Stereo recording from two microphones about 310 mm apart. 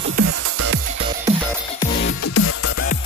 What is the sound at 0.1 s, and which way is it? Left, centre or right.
Music, right.